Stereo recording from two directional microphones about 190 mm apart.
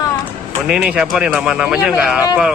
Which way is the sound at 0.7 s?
5° right (ahead or behind).